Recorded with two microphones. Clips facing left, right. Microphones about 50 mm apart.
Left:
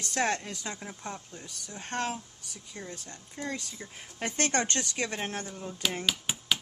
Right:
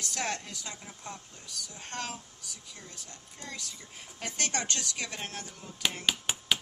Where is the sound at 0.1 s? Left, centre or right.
Left.